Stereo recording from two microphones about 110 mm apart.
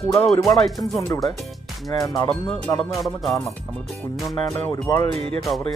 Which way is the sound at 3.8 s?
Centre (ahead or behind).